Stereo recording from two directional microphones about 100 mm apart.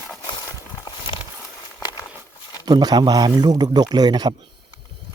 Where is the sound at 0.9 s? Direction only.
55° left (ahead or behind).